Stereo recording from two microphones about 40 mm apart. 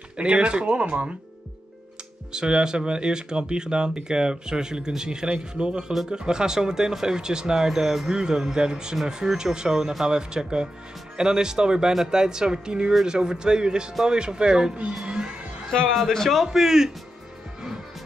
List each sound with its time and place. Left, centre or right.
0.2 s speech: right
2.3 s speech: centre
15.0 s crowd: right
15.9 s speech: centre
16.4 s speech: centre